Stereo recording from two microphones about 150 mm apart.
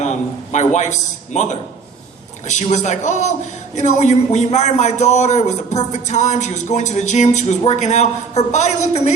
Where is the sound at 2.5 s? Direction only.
50° left (ahead or behind).